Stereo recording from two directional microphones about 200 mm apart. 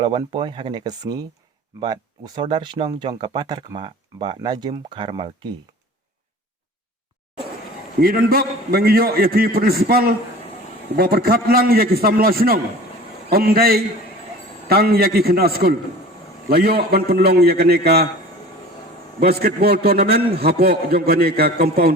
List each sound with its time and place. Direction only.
0.0 s speech: 25° right (ahead or behind)
7.9 s a man's voice: 45° right (ahead or behind)
19.2 s a man's voice: 50° right (ahead or behind)